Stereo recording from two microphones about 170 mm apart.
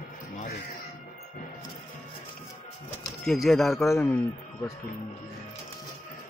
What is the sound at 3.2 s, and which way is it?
Speech, centre (ahead or behind).